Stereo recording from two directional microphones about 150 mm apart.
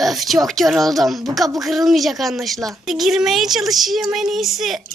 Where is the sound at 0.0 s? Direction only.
Centre (ahead or behind).